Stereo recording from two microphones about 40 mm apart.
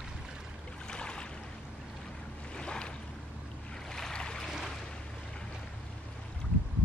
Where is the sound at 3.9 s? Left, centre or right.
Centre.